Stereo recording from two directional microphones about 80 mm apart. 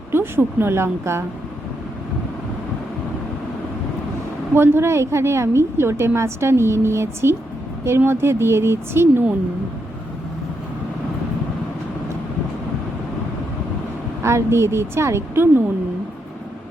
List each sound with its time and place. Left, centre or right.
0.1 s a woman's voice: right
4.5 s a woman's voice: right
14.2 s a woman's voice: right